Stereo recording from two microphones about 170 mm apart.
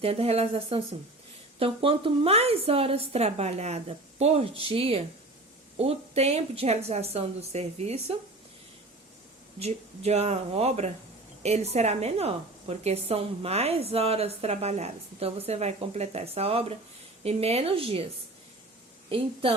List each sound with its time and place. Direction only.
0.0 s a woman's voice: 35° right (ahead or behind)
9.6 s a woman's voice: 40° right (ahead or behind)
19.0 s a woman's voice: 30° right (ahead or behind)